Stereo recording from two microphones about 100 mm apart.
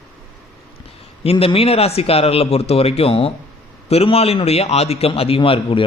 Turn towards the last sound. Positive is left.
turn(degrees=60)  # may be behind; listen again after turning